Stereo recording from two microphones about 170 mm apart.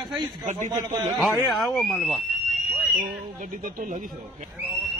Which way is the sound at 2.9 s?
50° right (ahead or behind).